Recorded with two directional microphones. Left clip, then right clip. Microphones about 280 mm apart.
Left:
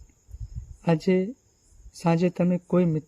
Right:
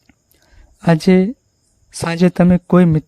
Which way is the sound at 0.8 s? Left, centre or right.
Right.